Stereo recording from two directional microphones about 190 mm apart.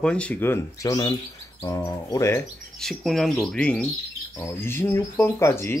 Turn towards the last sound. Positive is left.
turn(degrees=15)  # may be behind; listen again after turning